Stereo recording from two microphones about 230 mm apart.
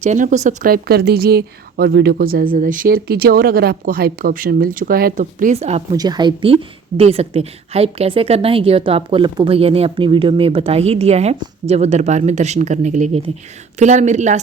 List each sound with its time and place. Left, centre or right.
0.0 s speech: right
5.9 s a woman's voice: centre